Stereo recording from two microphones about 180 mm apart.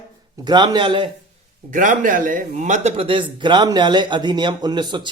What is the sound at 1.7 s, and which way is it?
Speech, 45° right (ahead or behind).